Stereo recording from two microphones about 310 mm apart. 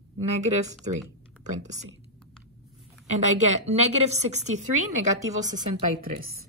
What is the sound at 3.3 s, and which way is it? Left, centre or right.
A woman's voice, right.